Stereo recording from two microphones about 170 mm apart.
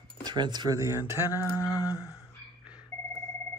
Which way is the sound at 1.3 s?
20° left (ahead or behind).